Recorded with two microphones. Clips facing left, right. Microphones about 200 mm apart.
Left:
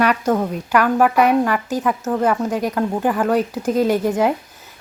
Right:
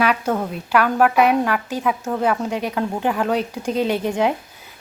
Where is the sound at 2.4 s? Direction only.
5° left (ahead or behind).